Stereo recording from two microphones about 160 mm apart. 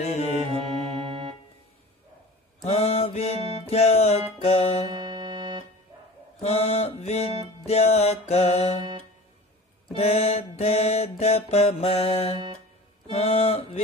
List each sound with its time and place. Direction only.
0.0 s music: 45° left (ahead or behind)
0.5 s music: 30° right (ahead or behind)
2.6 s music: 40° left (ahead or behind)
4.4 s mantra: 40° left (ahead or behind)
4.8 s music: 25° right (ahead or behind)
6.4 s mantra: 40° left (ahead or behind)
9.9 s mantra: 40° left (ahead or behind)